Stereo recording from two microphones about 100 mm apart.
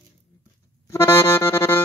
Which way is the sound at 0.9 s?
25° left (ahead or behind).